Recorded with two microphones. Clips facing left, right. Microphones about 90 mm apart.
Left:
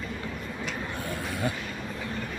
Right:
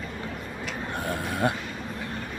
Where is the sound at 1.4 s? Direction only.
65° right (ahead or behind).